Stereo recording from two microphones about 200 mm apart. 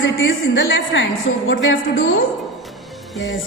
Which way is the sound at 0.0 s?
70° left (ahead or behind).